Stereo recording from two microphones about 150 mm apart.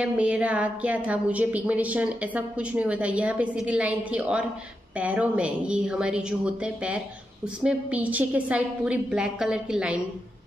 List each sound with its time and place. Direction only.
0.0 s a woman's voice: 10° right (ahead or behind)